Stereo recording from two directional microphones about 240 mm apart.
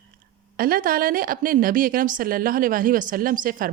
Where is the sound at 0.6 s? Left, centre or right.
Right.